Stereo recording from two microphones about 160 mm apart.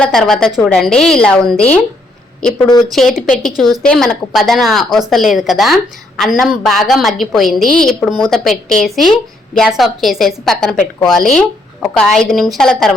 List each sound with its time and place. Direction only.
0.0 s a woman's voice: 5° left (ahead or behind)
2.9 s a woman's voice: centre (ahead or behind)
3.2 s a woman's voice: 55° left (ahead or behind)
3.6 s a woman's voice: centre (ahead or behind)